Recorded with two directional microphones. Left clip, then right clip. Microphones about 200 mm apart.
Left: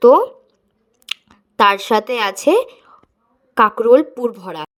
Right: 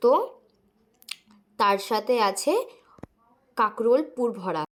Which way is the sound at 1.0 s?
30° left (ahead or behind).